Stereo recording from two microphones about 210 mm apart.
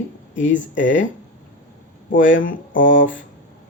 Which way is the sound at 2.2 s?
65° left (ahead or behind).